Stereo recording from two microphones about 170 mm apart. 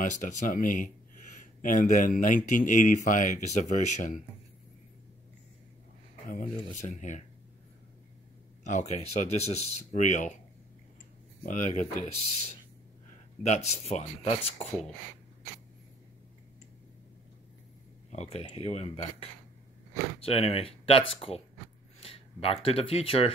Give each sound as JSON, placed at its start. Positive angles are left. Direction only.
{"t": 0.0, "sound": "speech", "side_deg": 45}
{"t": 6.2, "sound": "speech", "side_deg": 50}
{"t": 8.6, "sound": "speech", "side_deg": 40}
{"t": 11.4, "sound": "speech", "side_deg": 45}
{"t": 13.4, "sound": "speech", "side_deg": 40}
{"t": 18.1, "sound": "speech", "side_deg": 40}